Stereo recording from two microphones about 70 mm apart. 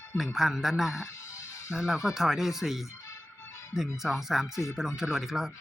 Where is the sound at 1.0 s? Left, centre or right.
Left.